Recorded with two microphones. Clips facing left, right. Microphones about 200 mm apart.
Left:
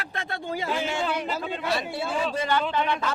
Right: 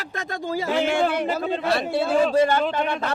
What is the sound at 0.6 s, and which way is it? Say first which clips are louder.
A man's voice: right 7 dB; 65° right (ahead or behind).